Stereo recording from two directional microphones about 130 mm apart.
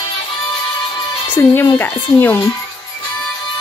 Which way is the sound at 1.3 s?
15° left (ahead or behind).